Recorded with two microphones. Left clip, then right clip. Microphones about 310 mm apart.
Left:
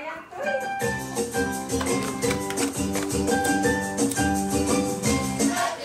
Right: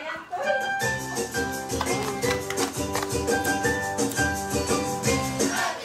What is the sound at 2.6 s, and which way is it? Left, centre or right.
Music, right.